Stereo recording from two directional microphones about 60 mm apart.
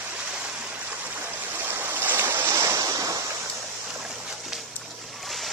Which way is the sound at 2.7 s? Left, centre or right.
Right.